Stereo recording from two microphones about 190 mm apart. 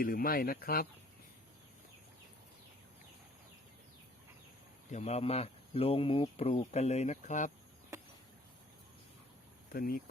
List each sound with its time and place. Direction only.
0.0 s speech: 50° left (ahead or behind)
4.9 s speech: 40° left (ahead or behind)
9.7 s speech: 50° left (ahead or behind)